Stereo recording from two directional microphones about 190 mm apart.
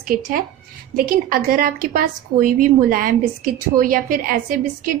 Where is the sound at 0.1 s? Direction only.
50° right (ahead or behind).